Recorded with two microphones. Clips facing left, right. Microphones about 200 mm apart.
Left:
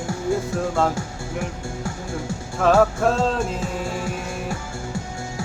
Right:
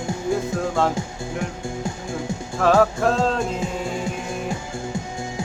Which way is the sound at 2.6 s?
Centre (ahead or behind).